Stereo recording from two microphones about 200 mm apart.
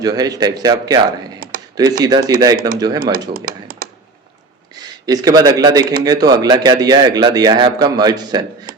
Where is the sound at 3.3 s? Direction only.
45° right (ahead or behind).